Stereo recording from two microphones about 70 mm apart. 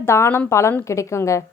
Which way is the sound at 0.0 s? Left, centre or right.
Left.